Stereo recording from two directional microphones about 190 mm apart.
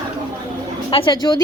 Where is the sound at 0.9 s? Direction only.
25° left (ahead or behind).